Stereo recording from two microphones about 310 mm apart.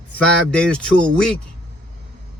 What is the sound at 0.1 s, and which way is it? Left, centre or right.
Speech, centre.